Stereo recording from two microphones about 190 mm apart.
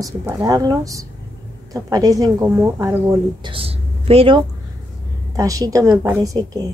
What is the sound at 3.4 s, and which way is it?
Speech, 30° right (ahead or behind).